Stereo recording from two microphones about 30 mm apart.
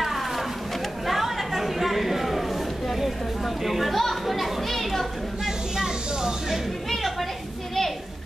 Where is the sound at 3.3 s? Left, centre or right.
Centre.